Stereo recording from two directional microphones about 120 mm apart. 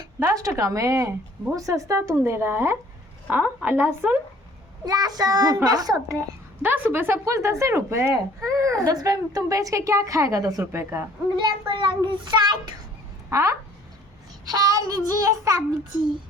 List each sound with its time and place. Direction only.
0.3 s a woman's voice: 30° right (ahead or behind)
4.9 s a child's voice: 30° right (ahead or behind)
6.6 s speech: 15° right (ahead or behind)
11.3 s a child's voice: 40° right (ahead or behind)
13.3 s speech: 25° right (ahead or behind)
14.4 s child singing: 30° right (ahead or behind)